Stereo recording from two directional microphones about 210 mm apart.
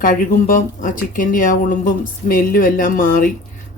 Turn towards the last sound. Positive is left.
turn(degrees=40)  # may be behind; listen again after turning